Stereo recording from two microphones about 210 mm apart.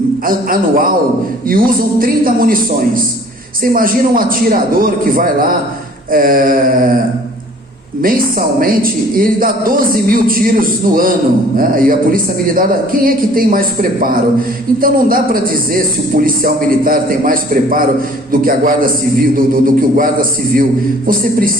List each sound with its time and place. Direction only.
0.3 s a woman's voice: 40° right (ahead or behind)
8.0 s a woman's voice: 45° right (ahead or behind)
21.1 s a woman's voice: 45° right (ahead or behind)